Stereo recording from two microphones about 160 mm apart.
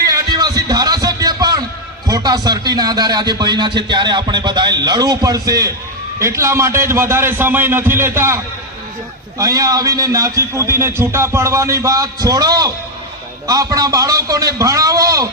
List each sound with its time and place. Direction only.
0.1 s music: 25° right (ahead or behind)
2.0 s a man's voice: 25° right (ahead or behind)
9.4 s speech: 20° right (ahead or behind)